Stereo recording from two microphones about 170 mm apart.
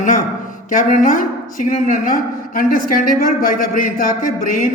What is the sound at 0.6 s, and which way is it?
A woman's voice, 50° left (ahead or behind).